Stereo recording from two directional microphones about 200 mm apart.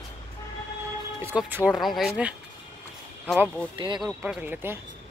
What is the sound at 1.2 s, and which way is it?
Speech, 10° right (ahead or behind).